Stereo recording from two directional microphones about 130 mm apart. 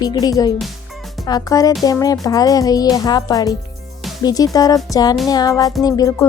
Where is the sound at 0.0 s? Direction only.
30° left (ahead or behind).